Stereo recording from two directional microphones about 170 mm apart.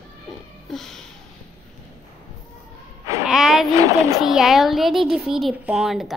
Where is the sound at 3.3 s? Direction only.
Centre (ahead or behind).